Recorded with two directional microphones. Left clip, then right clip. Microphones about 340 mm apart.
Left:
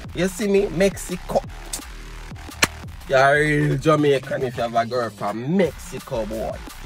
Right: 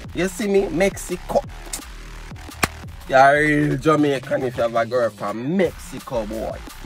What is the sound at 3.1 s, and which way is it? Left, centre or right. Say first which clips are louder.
Speech: right 3 dB; centre.